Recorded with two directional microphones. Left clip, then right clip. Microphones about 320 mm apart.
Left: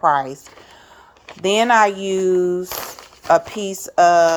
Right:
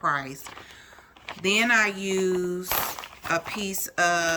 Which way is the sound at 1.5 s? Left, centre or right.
Centre.